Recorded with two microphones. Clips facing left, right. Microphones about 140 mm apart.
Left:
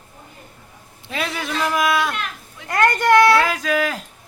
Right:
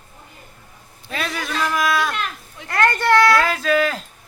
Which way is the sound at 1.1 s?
20° left (ahead or behind).